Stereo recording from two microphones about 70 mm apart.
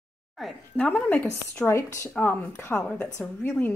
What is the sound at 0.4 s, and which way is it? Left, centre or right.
Speech, centre.